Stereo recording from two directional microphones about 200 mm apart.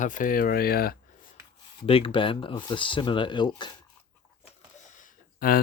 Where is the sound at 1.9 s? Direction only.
25° left (ahead or behind).